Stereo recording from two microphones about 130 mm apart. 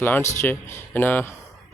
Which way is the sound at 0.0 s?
15° left (ahead or behind).